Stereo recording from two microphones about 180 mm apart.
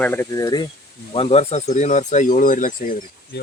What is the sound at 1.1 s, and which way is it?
Speech, 35° left (ahead or behind).